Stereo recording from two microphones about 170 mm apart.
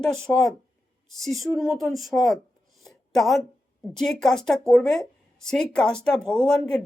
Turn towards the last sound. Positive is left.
turn(degrees=5)  # may be behind; listen again after turning